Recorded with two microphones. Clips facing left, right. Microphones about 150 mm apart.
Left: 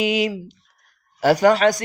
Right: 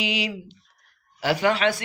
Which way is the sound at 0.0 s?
45° left (ahead or behind).